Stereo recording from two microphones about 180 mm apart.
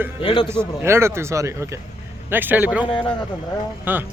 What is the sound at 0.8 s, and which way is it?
Speech, 15° right (ahead or behind).